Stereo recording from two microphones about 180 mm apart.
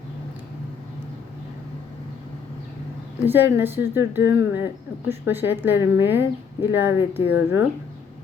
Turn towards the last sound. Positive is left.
turn(degrees=85)